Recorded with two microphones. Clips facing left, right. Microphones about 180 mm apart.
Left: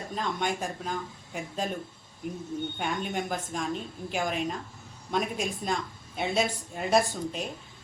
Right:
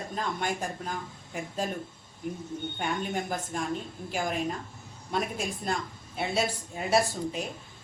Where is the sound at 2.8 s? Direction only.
Centre (ahead or behind).